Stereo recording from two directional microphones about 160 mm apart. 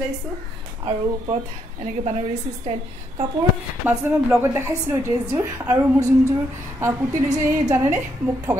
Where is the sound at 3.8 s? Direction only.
10° right (ahead or behind).